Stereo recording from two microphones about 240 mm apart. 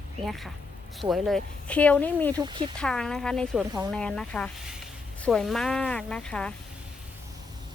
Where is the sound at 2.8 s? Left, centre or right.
Centre.